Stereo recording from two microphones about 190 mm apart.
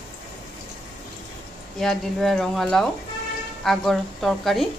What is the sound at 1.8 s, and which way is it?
A woman's voice, centre (ahead or behind).